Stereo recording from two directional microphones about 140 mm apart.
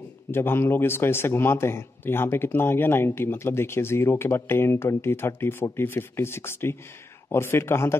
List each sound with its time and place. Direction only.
0.3 s a man's voice: 15° left (ahead or behind)